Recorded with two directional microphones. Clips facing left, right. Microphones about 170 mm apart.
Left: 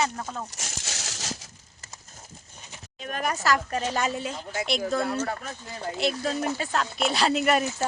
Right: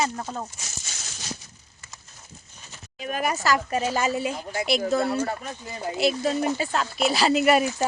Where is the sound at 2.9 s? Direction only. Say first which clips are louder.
Right 3 dB; 5° right (ahead or behind).